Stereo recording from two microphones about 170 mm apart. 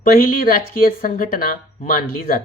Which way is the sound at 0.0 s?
55° left (ahead or behind).